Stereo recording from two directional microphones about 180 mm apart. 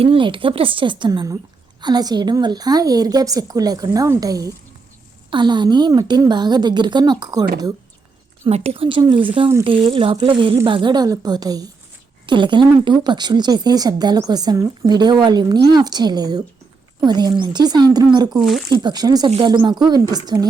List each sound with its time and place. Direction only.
0.0 s a woman's voice: 30° right (ahead or behind)
8.4 s a woman's voice: 35° right (ahead or behind)
18.3 s speech: centre (ahead or behind)
18.7 s a woman's voice: 25° right (ahead or behind)